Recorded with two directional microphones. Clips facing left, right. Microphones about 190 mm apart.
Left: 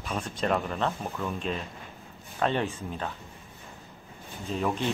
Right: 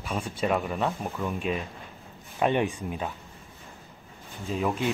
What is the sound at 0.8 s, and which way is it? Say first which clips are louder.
Speech: right 1 dB; 15° right (ahead or behind).